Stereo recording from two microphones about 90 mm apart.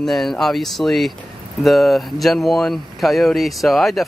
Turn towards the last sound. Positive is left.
turn(degrees=0)  # may be behind; listen again after turning